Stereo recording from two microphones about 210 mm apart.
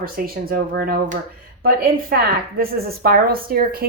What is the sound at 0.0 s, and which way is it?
Speech, 45° right (ahead or behind).